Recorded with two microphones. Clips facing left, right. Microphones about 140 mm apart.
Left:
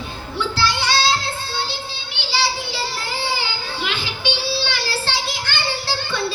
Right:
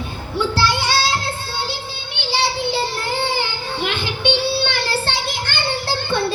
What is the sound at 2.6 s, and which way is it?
Child singing, 55° right (ahead or behind).